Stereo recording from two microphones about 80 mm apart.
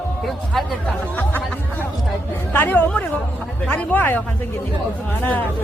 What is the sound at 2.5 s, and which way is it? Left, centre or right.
A woman's voice, left.